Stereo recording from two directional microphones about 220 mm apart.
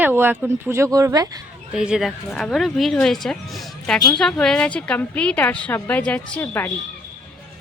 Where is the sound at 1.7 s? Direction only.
5° right (ahead or behind).